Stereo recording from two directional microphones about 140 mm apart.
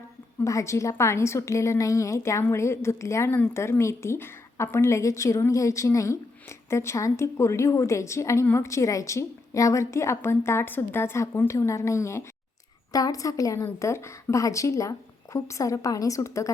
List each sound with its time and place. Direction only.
0.4 s a woman's voice: 20° left (ahead or behind)